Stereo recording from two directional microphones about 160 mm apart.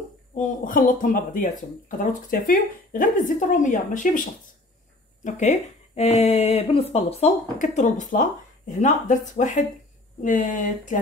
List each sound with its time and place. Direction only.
0.3 s speech: 55° left (ahead or behind)
5.2 s speech: 45° left (ahead or behind)